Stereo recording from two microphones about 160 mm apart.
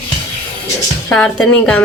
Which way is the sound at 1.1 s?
5° left (ahead or behind).